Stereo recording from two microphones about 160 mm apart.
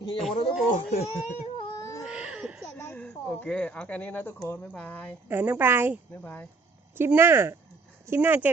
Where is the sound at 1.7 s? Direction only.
20° left (ahead or behind).